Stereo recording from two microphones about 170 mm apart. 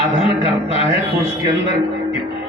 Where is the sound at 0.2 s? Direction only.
35° left (ahead or behind).